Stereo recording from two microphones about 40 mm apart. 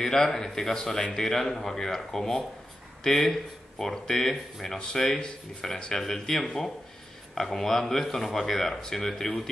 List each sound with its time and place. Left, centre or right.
0.0 s speech: centre
4.7 s speech: left